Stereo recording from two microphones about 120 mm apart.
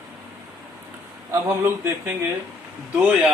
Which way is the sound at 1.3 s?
20° right (ahead or behind).